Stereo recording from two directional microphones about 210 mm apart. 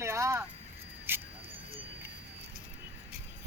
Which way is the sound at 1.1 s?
10° right (ahead or behind).